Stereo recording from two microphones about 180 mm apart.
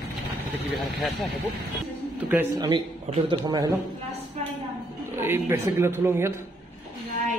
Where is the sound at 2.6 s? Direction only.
25° right (ahead or behind).